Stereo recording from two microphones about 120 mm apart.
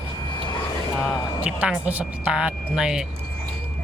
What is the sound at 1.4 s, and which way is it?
Speech, 10° right (ahead or behind).